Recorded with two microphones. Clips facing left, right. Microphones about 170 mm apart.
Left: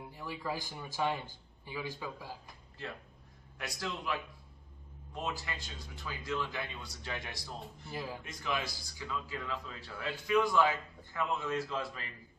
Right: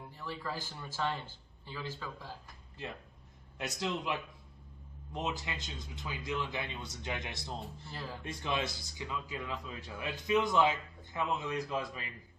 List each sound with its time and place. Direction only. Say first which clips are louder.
0.1 s speech: left 2 dB; 15° left (ahead or behind)
3.6 s speech: right 4 dB; 20° right (ahead or behind)
7.9 s speech: left 7 dB; 15° left (ahead or behind)
8.2 s speech: right 5 dB; 30° right (ahead or behind)